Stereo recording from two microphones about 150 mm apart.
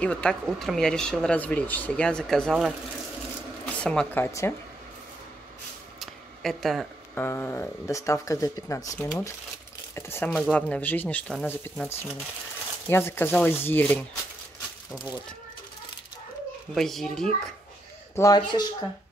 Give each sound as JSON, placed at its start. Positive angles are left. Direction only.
{"t": 0.0, "sound": "speech", "side_deg": 5}
{"t": 5.9, "sound": "a sound", "side_deg": 0}
{"t": 7.2, "sound": "speech", "side_deg": 15}
{"t": 16.7, "sound": "speech", "side_deg": 0}
{"t": 18.1, "sound": "speech", "side_deg": 25}